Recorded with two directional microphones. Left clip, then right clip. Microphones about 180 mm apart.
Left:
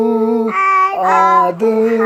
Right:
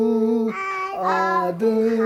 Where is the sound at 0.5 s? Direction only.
15° left (ahead or behind).